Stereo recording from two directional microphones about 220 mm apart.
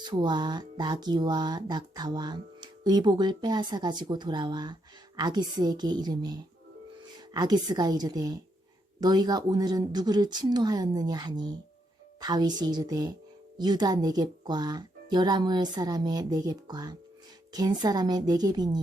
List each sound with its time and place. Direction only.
0.0 s a woman's voice: 20° right (ahead or behind)